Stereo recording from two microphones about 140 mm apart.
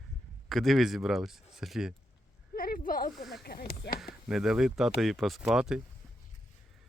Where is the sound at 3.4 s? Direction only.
90° left.